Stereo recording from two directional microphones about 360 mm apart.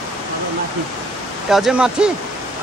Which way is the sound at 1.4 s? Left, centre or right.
Centre.